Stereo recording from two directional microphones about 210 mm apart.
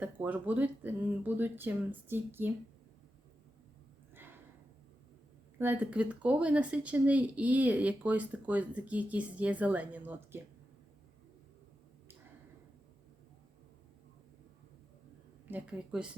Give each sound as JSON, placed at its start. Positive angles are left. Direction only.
{"t": 0.0, "sound": "speech", "side_deg": -10}
{"t": 4.1, "sound": "a sound", "side_deg": -10}
{"t": 5.5, "sound": "speech", "side_deg": -10}
{"t": 15.4, "sound": "a woman's voice", "side_deg": -5}